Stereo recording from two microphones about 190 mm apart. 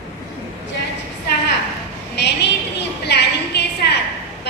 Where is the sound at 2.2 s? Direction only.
65° left (ahead or behind).